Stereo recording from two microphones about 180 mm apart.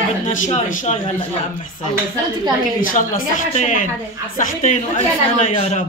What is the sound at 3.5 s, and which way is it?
A woman's voice, 40° left (ahead or behind).